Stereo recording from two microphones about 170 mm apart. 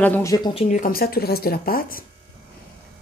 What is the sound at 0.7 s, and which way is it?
Speech, 55° left (ahead or behind).